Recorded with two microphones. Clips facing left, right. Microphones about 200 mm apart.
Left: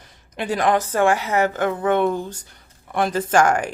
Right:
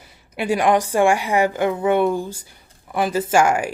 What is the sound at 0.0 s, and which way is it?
A woman's voice, 10° right (ahead or behind).